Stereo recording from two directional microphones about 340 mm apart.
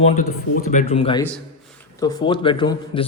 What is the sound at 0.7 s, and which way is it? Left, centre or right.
A man's voice, centre.